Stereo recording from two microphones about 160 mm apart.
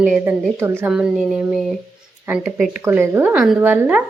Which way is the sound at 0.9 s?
Centre (ahead or behind).